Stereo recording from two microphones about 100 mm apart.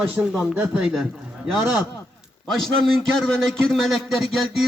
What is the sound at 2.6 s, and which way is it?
A man's voice, 5° left (ahead or behind).